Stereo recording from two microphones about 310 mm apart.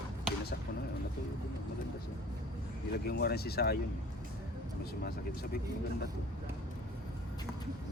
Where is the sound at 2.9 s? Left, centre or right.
Left.